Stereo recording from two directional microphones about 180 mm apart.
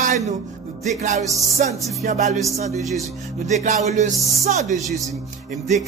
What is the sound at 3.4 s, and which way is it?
Speech, 40° right (ahead or behind).